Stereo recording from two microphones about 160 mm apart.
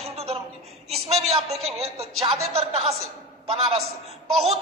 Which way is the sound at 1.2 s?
40° right (ahead or behind).